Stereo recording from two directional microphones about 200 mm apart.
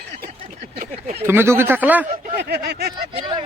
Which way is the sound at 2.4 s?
55° right (ahead or behind).